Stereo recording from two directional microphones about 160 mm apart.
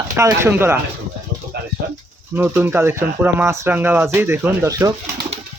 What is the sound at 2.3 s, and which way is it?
Speech, 10° right (ahead or behind).